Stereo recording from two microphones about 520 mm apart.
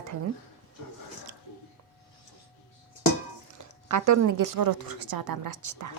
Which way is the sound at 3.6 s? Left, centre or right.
Right.